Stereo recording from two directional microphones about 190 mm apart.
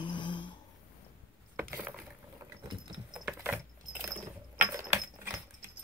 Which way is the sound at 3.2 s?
10° right (ahead or behind).